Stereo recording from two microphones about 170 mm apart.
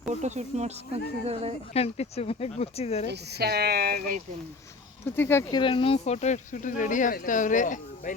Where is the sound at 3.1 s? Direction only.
75° right (ahead or behind).